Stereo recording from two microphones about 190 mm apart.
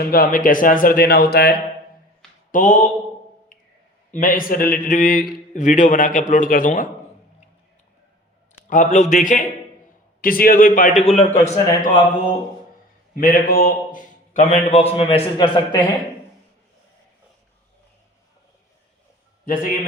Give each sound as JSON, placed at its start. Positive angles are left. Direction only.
{"t": 0.0, "sound": "speech", "side_deg": 50}
{"t": 2.5, "sound": "a man's voice", "side_deg": 45}
{"t": 4.1, "sound": "speech", "side_deg": 45}
{"t": 8.6, "sound": "a man's voice", "side_deg": 40}
{"t": 13.1, "sound": "a man's voice", "side_deg": 50}